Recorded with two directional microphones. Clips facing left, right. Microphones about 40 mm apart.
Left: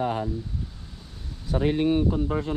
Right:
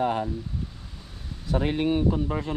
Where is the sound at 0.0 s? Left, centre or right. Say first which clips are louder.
Right 2 dB; right.